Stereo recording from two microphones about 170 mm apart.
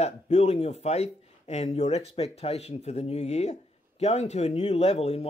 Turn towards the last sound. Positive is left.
turn(degrees=40)  # may be behind; listen again after turning